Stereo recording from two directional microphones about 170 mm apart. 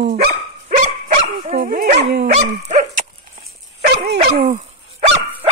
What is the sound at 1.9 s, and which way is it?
Dog, 75° right (ahead or behind).